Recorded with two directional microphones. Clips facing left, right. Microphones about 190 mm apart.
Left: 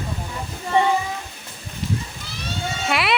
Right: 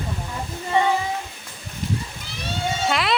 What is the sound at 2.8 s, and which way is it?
Speech, 10° left (ahead or behind).